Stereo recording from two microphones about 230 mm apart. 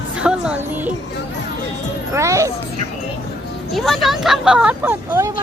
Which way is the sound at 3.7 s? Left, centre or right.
Centre.